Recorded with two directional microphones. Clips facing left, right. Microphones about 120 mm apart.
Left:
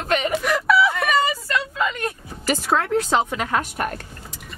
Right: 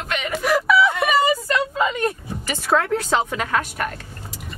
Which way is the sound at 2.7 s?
15° left (ahead or behind).